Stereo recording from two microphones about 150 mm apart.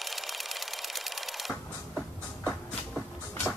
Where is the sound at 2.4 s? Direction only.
10° left (ahead or behind).